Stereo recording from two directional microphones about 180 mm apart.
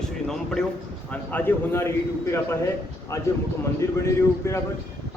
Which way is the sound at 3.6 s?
15° left (ahead or behind).